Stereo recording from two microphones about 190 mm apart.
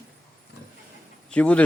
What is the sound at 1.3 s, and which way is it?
Speech, 5° left (ahead or behind).